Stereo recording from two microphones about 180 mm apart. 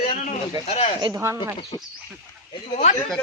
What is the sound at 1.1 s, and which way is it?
Speech, 15° right (ahead or behind).